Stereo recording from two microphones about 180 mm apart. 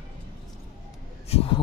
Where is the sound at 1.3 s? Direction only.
35° left (ahead or behind).